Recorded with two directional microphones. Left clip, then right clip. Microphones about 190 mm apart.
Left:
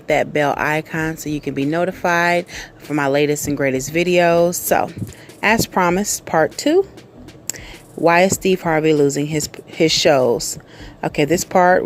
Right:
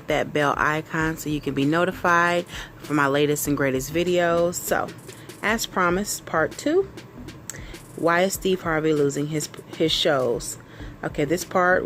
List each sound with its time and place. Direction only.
0.1 s speech: 15° left (ahead or behind)
8.0 s speech: 25° left (ahead or behind)